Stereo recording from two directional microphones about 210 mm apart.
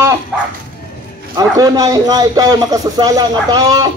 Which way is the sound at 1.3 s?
15° right (ahead or behind).